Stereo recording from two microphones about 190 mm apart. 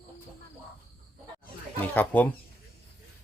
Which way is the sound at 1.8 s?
10° left (ahead or behind).